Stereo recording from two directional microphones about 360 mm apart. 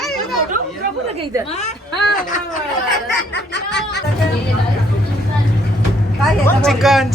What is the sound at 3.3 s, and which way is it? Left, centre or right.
Speech, left.